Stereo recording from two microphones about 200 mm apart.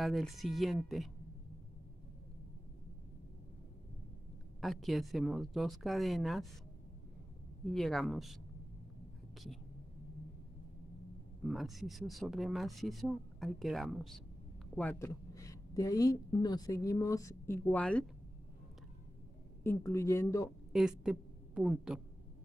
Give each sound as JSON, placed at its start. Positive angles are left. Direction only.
{"t": 0.0, "sound": "speech", "side_deg": 0}
{"t": 4.6, "sound": "speech", "side_deg": 0}
{"t": 7.7, "sound": "speech", "side_deg": 0}
{"t": 11.4, "sound": "a woman's voice", "side_deg": 0}
{"t": 19.6, "sound": "a woman's voice", "side_deg": 15}
{"t": 20.7, "sound": "a woman's voice", "side_deg": -5}